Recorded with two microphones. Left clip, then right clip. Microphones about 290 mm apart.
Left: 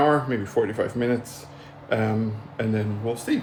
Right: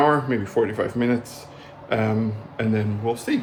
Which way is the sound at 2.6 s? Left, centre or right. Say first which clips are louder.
Right 2 dB; centre.